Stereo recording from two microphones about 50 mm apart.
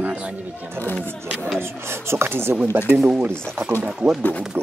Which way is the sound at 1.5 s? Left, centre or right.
Right.